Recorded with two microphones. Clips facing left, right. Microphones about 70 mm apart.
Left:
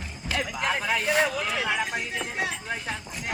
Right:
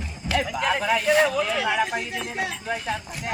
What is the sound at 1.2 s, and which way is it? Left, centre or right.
Speech, centre.